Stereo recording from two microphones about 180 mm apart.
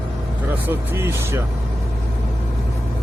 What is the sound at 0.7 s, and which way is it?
Speech, 15° right (ahead or behind).